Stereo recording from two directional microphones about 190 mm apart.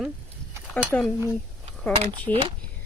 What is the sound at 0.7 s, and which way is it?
Speech, 5° left (ahead or behind).